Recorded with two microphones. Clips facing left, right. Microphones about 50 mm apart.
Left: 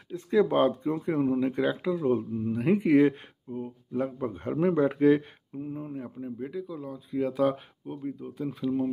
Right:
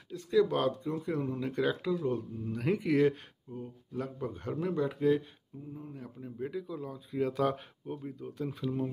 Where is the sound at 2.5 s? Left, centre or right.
Centre; by 5.9 s left.